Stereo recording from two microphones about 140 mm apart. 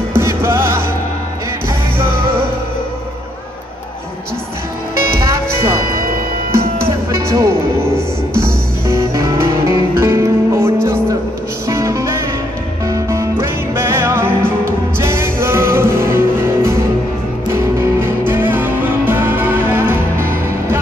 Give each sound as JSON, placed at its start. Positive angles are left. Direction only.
{"t": 0.1, "sound": "music", "side_deg": -20}
{"t": 7.1, "sound": "music", "side_deg": -20}